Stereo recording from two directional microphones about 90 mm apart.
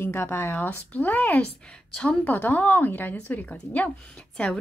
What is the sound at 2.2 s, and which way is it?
A woman's voice, 20° left (ahead or behind).